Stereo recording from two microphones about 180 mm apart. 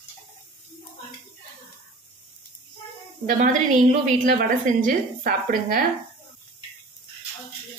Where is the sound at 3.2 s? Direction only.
45° right (ahead or behind).